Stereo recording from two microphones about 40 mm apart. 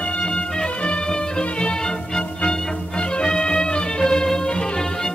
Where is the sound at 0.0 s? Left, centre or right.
Left.